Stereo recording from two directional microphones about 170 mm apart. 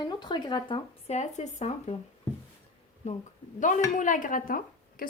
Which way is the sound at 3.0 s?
40° left (ahead or behind).